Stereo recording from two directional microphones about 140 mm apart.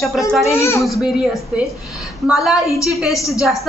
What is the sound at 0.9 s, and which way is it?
A woman's voice, centre (ahead or behind).